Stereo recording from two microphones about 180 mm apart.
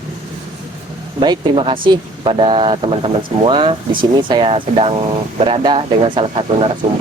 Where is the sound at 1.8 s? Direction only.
30° right (ahead or behind).